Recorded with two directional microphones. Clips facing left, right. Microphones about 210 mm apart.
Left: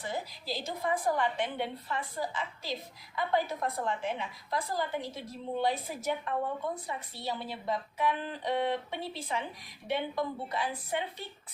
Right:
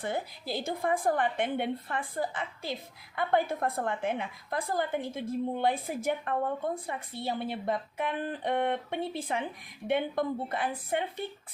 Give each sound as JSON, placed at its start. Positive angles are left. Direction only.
{"t": 0.0, "sound": "a woman's voice", "side_deg": -55}